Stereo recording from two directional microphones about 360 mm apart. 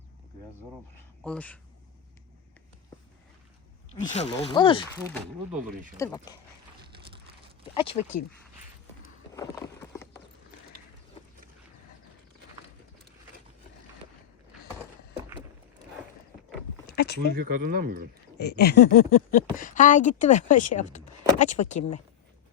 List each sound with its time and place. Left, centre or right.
1.2 s speech: centre
3.9 s speech: centre
7.8 s speech: centre
9.3 s clip-clop: centre
16.9 s a sound: left
17.3 s speech: right
18.3 s speech: left